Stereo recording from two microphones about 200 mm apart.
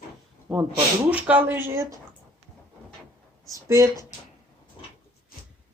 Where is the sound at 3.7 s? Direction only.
15° right (ahead or behind).